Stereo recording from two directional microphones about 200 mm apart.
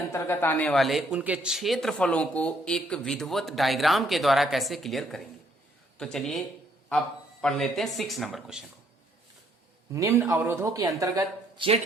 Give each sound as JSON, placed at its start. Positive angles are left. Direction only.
{"t": 0.1, "sound": "a man's voice", "side_deg": 10}
{"t": 7.4, "sound": "a man's voice", "side_deg": 0}
{"t": 9.9, "sound": "speech", "side_deg": -15}